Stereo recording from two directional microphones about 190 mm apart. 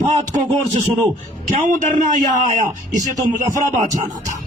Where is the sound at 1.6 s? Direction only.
40° right (ahead or behind).